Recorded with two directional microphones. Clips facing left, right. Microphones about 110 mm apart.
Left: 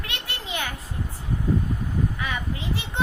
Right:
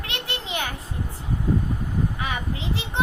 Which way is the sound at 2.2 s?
20° right (ahead or behind).